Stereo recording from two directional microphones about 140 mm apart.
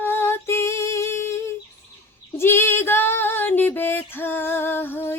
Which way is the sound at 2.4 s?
15° left (ahead or behind).